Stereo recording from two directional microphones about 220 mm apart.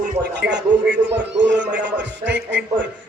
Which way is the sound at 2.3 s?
50° right (ahead or behind).